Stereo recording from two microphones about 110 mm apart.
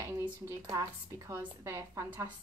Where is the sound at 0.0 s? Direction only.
30° right (ahead or behind).